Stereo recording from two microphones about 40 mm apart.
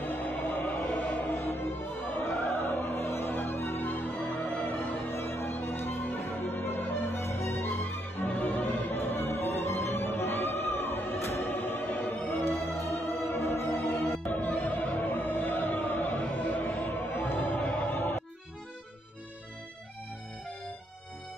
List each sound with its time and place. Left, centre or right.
0.0 s music: left
14.3 s music: left